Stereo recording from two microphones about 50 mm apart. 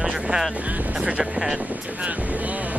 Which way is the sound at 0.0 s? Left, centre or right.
Centre.